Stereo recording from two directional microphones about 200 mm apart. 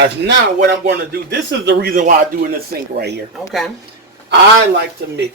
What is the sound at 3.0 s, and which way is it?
Speech, 55° right (ahead or behind).